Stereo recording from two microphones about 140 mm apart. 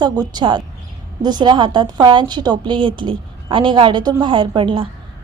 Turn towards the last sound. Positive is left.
turn(degrees=-35)  # may be behind; listen again after turning